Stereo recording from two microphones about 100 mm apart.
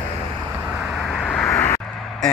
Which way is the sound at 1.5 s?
30° left (ahead or behind).